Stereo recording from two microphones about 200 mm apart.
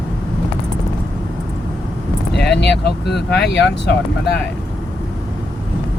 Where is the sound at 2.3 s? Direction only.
60° left (ahead or behind).